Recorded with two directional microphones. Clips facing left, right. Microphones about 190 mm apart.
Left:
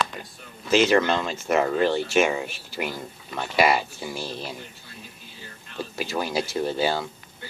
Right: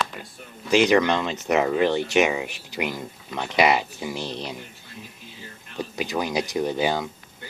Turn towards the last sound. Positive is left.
turn(degrees=-15)  # may be behind; listen again after turning